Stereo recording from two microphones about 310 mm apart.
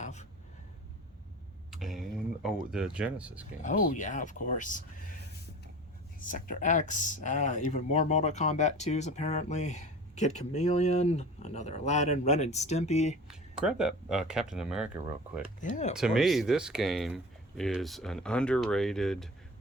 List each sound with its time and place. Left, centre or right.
0.0 s a sound: left
1.7 s speech: centre
3.6 s speech: left
6.1 s speech: left
13.2 s speech: centre
15.7 s speech: left
16.0 s speech: centre